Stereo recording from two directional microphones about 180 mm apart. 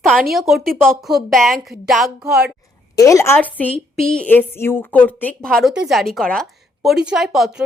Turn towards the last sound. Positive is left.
turn(degrees=0)  # may be behind; listen again after turning